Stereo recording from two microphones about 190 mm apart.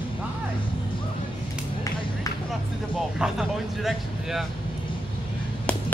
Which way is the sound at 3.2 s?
Centre (ahead or behind).